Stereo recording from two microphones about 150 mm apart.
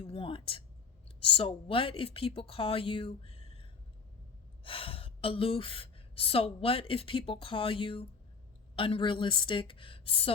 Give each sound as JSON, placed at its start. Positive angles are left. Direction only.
{"t": 0.0, "sound": "a woman's voice", "side_deg": 40}